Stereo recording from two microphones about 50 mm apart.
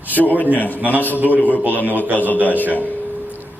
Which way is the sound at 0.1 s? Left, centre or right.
Left.